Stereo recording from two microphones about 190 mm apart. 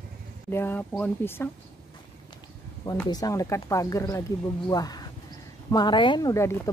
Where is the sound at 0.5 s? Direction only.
10° left (ahead or behind).